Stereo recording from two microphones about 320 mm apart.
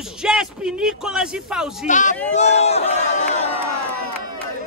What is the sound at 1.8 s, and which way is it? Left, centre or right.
Speech, left.